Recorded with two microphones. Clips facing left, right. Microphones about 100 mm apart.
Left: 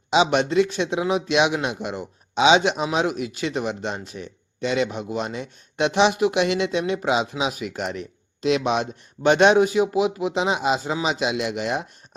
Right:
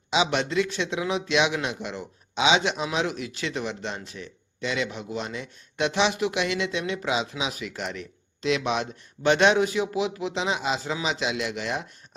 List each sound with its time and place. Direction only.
0.2 s a man's voice: 20° left (ahead or behind)
4.6 s speech: 55° left (ahead or behind)
4.9 s a man's voice: 20° left (ahead or behind)
7.0 s speech: 50° left (ahead or behind)
7.6 s a man's voice: 20° left (ahead or behind)